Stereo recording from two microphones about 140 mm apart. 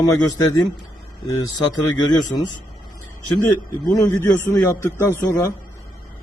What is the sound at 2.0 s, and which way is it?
Speech, 25° left (ahead or behind).